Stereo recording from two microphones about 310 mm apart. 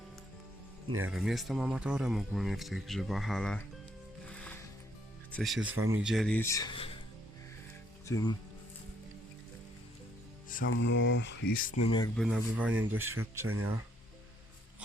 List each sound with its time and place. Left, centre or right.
0.9 s speech: right
1.1 s speech: centre
4.3 s music: centre
5.3 s speech: centre
5.7 s speech: right
6.0 s speech: centre
8.0 s speech: centre
10.7 s speech: left; by 12.1 s centre
12.1 s speech: centre
12.7 s speech: right